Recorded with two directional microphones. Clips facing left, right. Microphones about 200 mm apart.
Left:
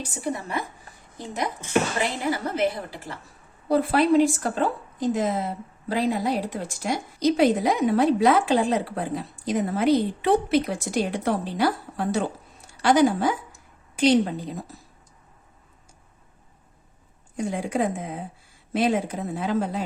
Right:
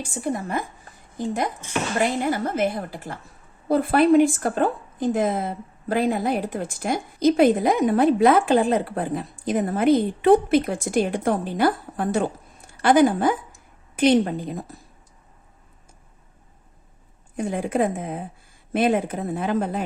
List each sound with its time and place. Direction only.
0.0 s a woman's voice: 50° right (ahead or behind)
2.3 s a woman's voice: 50° right (ahead or behind)
17.3 s a woman's voice: 55° right (ahead or behind)